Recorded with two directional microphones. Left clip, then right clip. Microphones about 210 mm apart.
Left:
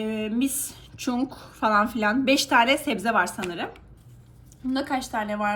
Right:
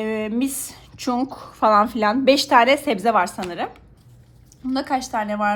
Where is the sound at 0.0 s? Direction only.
30° right (ahead or behind).